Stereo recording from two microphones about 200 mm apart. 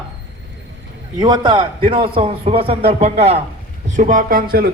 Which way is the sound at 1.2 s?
20° right (ahead or behind).